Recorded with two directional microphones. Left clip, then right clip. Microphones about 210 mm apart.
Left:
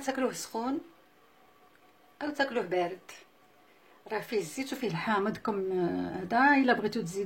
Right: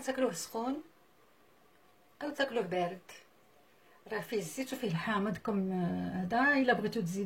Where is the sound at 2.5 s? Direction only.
25° left (ahead or behind).